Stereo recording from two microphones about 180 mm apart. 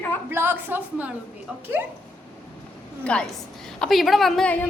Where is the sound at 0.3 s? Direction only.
10° right (ahead or behind).